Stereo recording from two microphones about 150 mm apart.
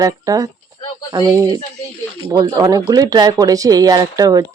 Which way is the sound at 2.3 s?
25° right (ahead or behind).